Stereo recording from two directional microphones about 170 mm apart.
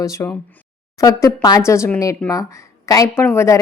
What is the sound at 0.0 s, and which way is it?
A woman's voice, 15° left (ahead or behind).